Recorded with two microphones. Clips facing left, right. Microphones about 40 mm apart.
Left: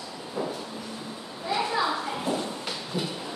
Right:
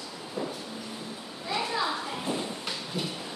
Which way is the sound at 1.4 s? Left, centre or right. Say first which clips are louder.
Left 3 dB; centre.